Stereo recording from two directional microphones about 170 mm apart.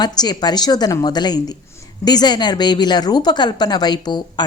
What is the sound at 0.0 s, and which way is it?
Speech, 25° left (ahead or behind).